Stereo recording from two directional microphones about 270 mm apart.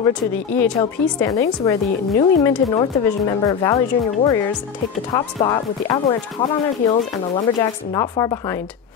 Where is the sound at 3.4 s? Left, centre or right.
Centre.